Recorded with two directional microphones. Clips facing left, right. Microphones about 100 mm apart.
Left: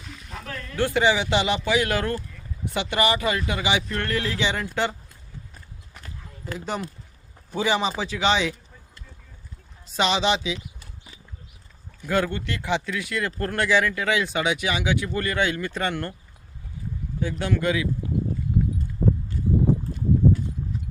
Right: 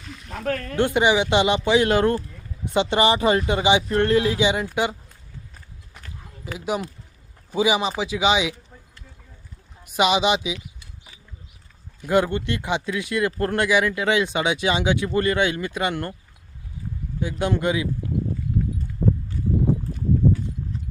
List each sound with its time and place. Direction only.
0.3 s speech: 60° right (ahead or behind)
0.8 s speech: 20° right (ahead or behind)
6.4 s speech: 10° right (ahead or behind)
9.8 s speech: 15° right (ahead or behind)
12.0 s speech: 20° right (ahead or behind)
17.2 s speech: 15° right (ahead or behind)